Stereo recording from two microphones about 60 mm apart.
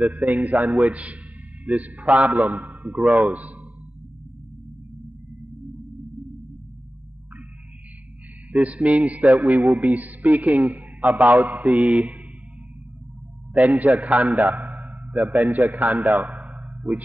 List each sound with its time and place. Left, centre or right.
0.0 s a man's voice: right
8.5 s a man's voice: right
9.6 s a man's voice: centre
9.9 s a man's voice: right
13.9 s a man's voice: right
14.2 s a sound: right
15.5 s a man's voice: right
16.1 s a sound: centre